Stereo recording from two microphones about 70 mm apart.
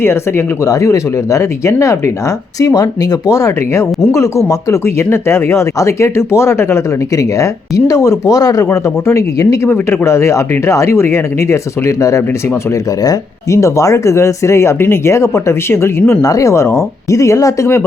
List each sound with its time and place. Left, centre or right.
0.0 s speech: left
0.7 s speech: left
2.6 s speech: left
8.7 s speech: left
9.6 s speech: left
13.5 s speech: left
16.2 s speech: left